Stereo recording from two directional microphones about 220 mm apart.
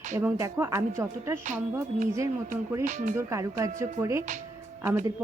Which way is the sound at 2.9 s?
35° right (ahead or behind).